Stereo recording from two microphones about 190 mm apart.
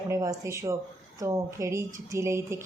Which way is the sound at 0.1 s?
15° right (ahead or behind).